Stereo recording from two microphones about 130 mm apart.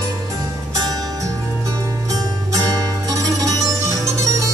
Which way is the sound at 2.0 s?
30° right (ahead or behind).